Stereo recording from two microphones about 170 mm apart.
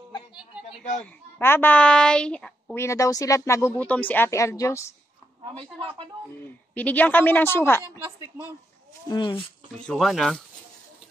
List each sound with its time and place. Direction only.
1.4 s speech: 10° left (ahead or behind)
5.6 s speech: 30° right (ahead or behind)
6.4 s speech: 10° left (ahead or behind)
9.1 s speech: 30° left (ahead or behind)
9.8 s speech: centre (ahead or behind)